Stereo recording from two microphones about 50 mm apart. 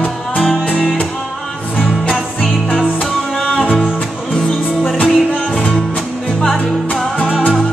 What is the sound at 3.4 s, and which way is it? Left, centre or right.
Music, centre.